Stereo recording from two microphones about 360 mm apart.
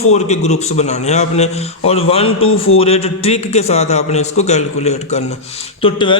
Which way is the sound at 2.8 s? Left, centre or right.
Centre.